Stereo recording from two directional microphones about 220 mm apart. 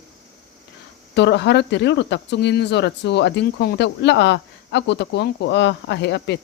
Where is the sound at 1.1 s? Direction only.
50° left (ahead or behind).